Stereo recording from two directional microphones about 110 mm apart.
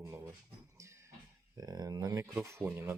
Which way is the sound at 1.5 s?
35° right (ahead or behind).